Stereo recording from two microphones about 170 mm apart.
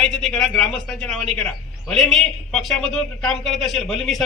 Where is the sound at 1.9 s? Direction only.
Centre (ahead or behind).